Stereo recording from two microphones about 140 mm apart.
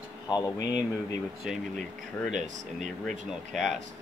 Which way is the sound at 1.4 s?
Centre (ahead or behind).